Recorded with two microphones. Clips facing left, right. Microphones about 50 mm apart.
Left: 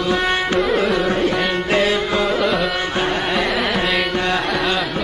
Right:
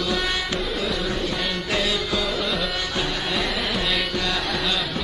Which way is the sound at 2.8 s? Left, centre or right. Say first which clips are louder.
Left 6 dB; left.